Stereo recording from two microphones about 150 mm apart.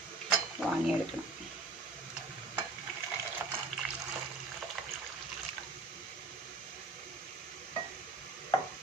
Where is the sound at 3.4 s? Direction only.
15° right (ahead or behind).